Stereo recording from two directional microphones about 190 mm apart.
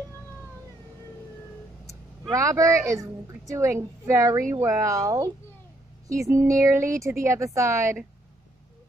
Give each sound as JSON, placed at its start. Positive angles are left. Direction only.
{"t": 2.3, "sound": "a woman's voice", "side_deg": -15}